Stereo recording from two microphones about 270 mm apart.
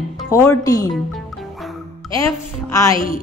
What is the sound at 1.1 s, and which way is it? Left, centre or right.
Music, centre.